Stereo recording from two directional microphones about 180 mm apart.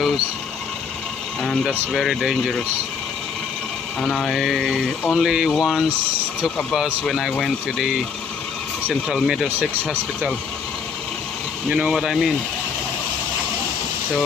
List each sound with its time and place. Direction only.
1.4 s speech: centre (ahead or behind)
4.0 s speech: centre (ahead or behind)
11.7 s speech: 5° right (ahead or behind)